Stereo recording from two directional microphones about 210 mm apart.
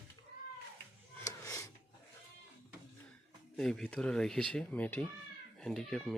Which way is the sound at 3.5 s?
Centre (ahead or behind).